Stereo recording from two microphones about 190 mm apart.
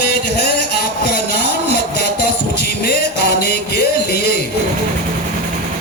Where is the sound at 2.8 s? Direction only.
60° left (ahead or behind).